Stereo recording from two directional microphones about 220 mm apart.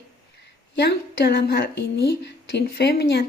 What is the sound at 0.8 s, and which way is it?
Speech, 45° left (ahead or behind).